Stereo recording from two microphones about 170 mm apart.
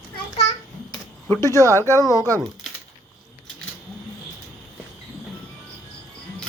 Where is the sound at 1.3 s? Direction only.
20° left (ahead or behind).